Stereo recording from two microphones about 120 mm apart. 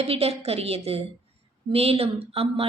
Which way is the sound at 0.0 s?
55° right (ahead or behind).